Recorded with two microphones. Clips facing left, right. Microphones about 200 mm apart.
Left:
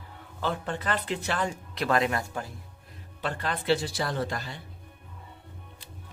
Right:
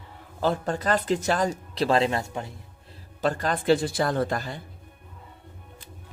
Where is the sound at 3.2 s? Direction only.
45° right (ahead or behind).